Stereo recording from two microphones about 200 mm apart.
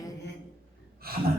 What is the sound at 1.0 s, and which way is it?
Gasp, 50° right (ahead or behind).